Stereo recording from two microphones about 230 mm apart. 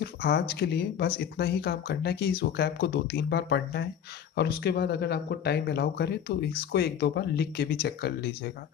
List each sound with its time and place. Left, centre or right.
0.0 s speech: left